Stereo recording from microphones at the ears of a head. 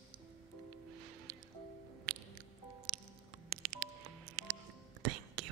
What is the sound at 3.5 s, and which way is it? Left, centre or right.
Music, right.